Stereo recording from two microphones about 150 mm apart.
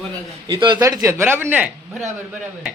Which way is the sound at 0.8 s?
20° right (ahead or behind).